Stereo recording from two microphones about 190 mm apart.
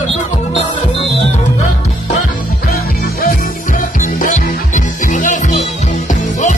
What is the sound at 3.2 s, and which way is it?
Music, 45° left (ahead or behind).